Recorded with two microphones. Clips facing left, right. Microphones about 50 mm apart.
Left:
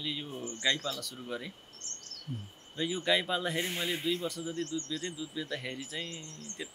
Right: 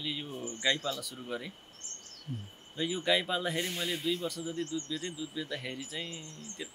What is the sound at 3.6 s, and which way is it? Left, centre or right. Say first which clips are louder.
Speech: left 1 dB; centre.